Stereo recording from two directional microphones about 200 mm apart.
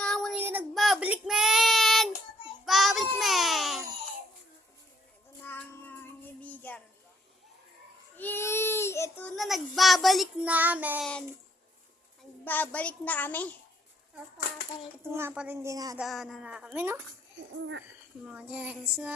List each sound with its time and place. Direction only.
0.0 s child singing: 5° left (ahead or behind)
0.3 s child singing: 10° right (ahead or behind)
3.2 s baby cry: centre (ahead or behind)
5.4 s child singing: 10° left (ahead or behind)
8.1 s baby cry: 10° left (ahead or behind); by 11.0 s 10° right (ahead or behind)
12.5 s a child's voice: 10° left (ahead or behind)
15.1 s a woman's voice: 10° right (ahead or behind)
16.0 s a woman's voice: centre (ahead or behind)
17.6 s speech: 65° right (ahead or behind)
18.3 s a woman's voice: 5° right (ahead or behind)